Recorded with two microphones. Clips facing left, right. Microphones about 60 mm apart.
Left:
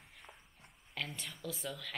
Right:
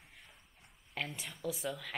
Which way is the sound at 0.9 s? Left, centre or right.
Centre.